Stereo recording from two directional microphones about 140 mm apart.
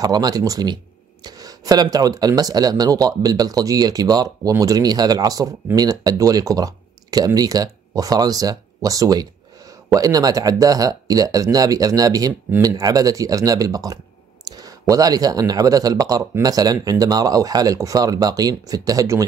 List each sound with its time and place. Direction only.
0.0 s speech: 30° right (ahead or behind)